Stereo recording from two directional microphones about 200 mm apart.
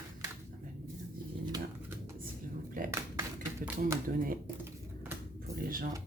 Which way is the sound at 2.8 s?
45° right (ahead or behind).